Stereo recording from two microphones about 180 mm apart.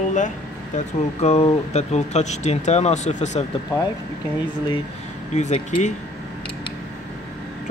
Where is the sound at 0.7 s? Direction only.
35° left (ahead or behind).